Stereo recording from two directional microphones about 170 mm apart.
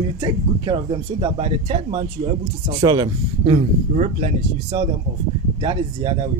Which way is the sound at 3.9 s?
45° right (ahead or behind).